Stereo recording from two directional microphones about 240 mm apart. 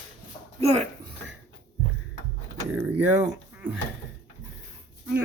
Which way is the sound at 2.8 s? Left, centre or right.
Centre.